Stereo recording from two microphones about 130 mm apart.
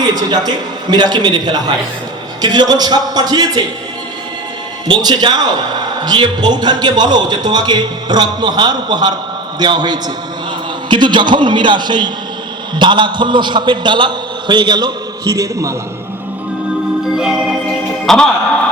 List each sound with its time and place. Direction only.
0.0 s a man's voice: 30° right (ahead or behind)
4.9 s a man's voice: 35° right (ahead or behind)
17.2 s organ: 5° right (ahead or behind)
18.0 s music: 5° left (ahead or behind)